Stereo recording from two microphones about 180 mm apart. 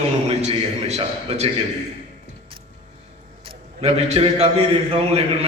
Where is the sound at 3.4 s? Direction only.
30° right (ahead or behind).